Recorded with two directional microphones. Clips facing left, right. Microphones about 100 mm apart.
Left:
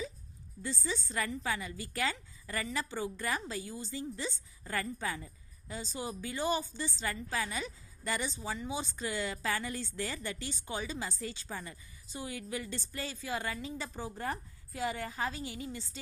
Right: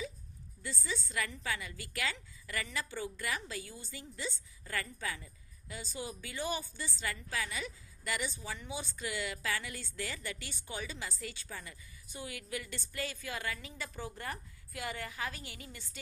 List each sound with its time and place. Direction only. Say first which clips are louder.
0.6 s a woman's voice: left 3 dB; 30° left (ahead or behind)
3.2 s a woman's voice: left 3 dB; 35° left (ahead or behind)
5.8 s a woman's voice: left 3 dB; 20° left (ahead or behind)
6.8 s a woman's voice: left 3 dB; 35° left (ahead or behind)
8.4 s a woman's voice: left 5 dB; 20° left (ahead or behind)
9.0 s a woman's voice: left 3 dB; 35° left (ahead or behind)
10.4 s a woman's voice: left 4 dB; 20° left (ahead or behind)
11.2 s a woman's voice: left 4 dB; 30° left (ahead or behind)